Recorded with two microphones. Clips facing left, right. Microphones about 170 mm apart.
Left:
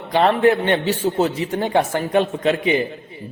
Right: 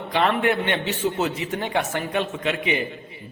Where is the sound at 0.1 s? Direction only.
35° left (ahead or behind).